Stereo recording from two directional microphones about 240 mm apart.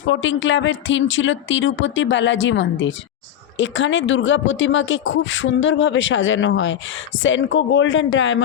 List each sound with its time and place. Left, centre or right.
0.0 s speech: left